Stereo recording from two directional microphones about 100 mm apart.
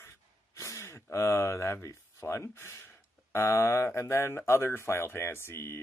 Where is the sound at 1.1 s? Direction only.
30° left (ahead or behind).